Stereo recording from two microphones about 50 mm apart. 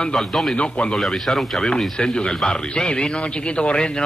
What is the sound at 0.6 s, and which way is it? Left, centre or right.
Speech, left.